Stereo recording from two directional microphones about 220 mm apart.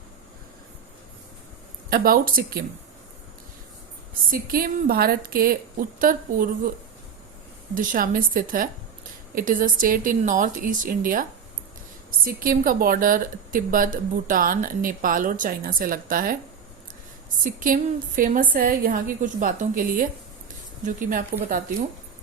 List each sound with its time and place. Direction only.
1.9 s a woman's voice: 40° right (ahead or behind)
4.3 s a woman's voice: 40° right (ahead or behind)
7.8 s a woman's voice: 40° right (ahead or behind)
17.4 s a woman's voice: 35° right (ahead or behind)